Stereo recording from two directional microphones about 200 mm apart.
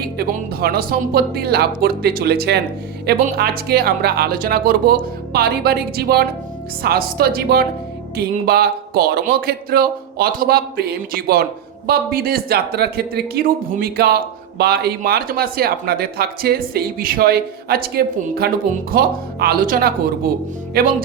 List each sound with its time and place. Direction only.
0.2 s speech: 50° right (ahead or behind)